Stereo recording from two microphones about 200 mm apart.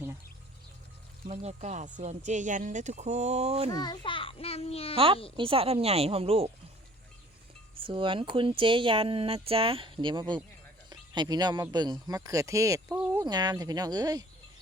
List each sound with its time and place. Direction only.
1.3 s speech: 30° right (ahead or behind)
3.7 s a child's voice: 20° left (ahead or behind)
4.9 s speech: 25° right (ahead or behind)
7.8 s speech: 25° right (ahead or behind)